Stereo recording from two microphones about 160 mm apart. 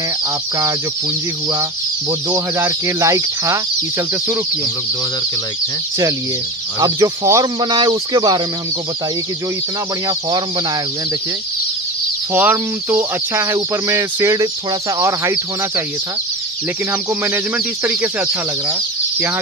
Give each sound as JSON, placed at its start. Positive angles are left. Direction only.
{"t": 1.5, "sound": "speech", "side_deg": -20}
{"t": 6.8, "sound": "speech", "side_deg": -20}
{"t": 12.4, "sound": "speech", "side_deg": -10}
{"t": 17.8, "sound": "speech", "side_deg": -10}